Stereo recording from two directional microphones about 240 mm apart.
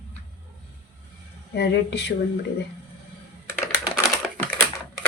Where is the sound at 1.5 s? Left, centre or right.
Left.